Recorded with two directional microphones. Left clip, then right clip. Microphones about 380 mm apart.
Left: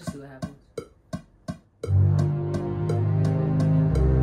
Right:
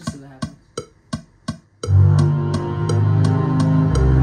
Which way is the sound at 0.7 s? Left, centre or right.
Right.